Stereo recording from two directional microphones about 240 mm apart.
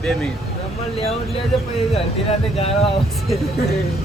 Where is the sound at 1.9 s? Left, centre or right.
Left.